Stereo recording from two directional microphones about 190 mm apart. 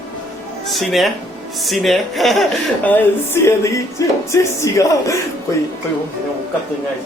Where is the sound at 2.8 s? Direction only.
10° left (ahead or behind).